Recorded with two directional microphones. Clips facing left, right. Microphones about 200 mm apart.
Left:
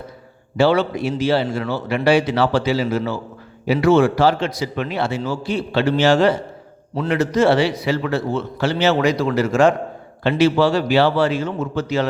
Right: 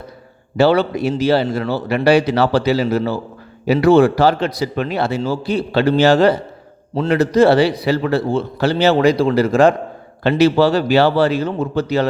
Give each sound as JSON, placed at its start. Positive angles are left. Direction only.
{"t": 0.5, "sound": "a man's voice", "side_deg": -40}